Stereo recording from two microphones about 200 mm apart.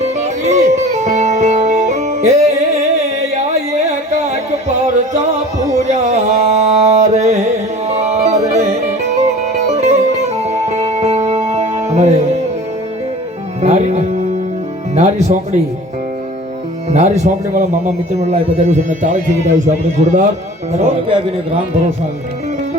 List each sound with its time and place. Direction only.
0.0 s music: 35° right (ahead or behind)
13.6 s music: 35° right (ahead or behind)
16.9 s a man's voice: 35° right (ahead or behind)